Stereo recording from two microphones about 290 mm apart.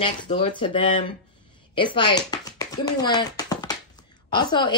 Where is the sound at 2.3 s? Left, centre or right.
Centre.